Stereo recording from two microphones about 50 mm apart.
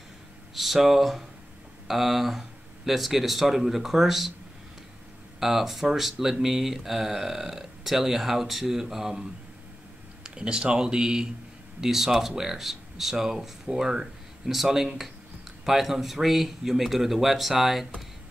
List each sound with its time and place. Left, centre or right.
0.6 s speech: centre
5.4 s speech: centre
10.2 s speech: centre